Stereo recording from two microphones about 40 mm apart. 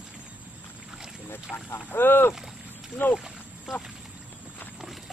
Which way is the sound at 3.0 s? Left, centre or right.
Left.